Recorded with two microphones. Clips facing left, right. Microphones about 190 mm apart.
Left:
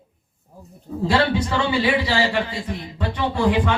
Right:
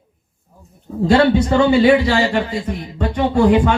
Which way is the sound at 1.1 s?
45° right (ahead or behind).